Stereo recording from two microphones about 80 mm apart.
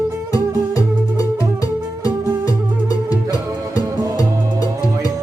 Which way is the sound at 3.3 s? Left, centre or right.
Left.